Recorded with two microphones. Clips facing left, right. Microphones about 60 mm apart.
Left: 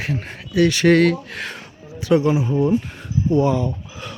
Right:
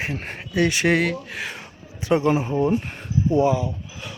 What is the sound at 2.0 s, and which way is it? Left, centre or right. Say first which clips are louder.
Speech: left 2 dB; right.